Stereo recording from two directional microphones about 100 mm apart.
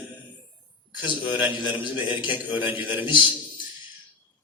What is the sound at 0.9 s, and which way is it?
A man's voice, 15° right (ahead or behind).